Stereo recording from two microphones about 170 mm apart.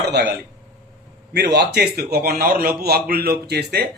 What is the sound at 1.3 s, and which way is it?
A man's voice, 85° right.